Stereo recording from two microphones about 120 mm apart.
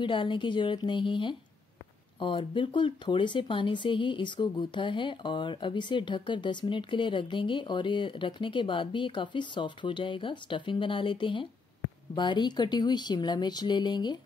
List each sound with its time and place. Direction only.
0.0 s speech: 45° left (ahead or behind)